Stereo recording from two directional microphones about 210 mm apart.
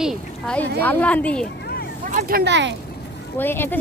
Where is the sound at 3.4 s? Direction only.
10° left (ahead or behind).